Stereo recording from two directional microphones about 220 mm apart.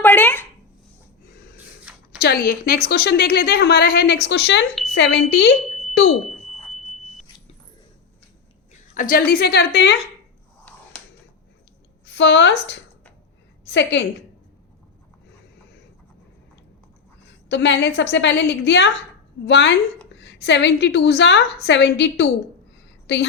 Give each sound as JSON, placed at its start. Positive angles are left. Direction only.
{"t": 0.0, "sound": "a sound", "side_deg": 10}
{"t": 1.5, "sound": "a sound", "side_deg": -5}
{"t": 2.1, "sound": "a woman's voice", "side_deg": 45}
{"t": 6.2, "sound": "smoke detector", "side_deg": 0}
{"t": 9.0, "sound": "a woman's voice", "side_deg": 40}
{"t": 12.0, "sound": "a woman's voice", "side_deg": 50}
{"t": 17.5, "sound": "a woman's voice", "side_deg": 50}